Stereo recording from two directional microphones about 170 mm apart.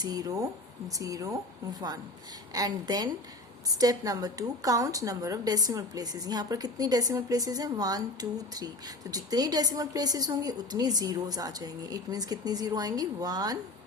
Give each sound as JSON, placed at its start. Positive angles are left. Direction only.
{"t": 0.0, "sound": "a woman's voice", "side_deg": -20}
{"t": 2.5, "sound": "a woman's voice", "side_deg": -20}